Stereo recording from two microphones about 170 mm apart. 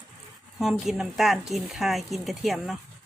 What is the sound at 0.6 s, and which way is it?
Speech, centre (ahead or behind).